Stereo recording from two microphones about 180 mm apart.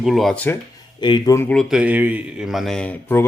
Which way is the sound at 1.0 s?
25° left (ahead or behind).